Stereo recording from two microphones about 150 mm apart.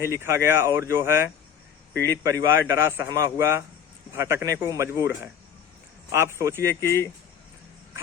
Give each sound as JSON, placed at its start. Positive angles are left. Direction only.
{"t": 0.0, "sound": "a man's voice", "side_deg": -20}
{"t": 6.8, "sound": "speech", "side_deg": 15}